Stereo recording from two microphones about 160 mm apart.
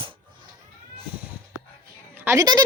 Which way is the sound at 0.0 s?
30° right (ahead or behind).